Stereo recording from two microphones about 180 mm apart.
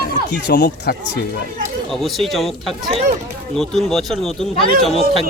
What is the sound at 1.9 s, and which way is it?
Speech, centre (ahead or behind).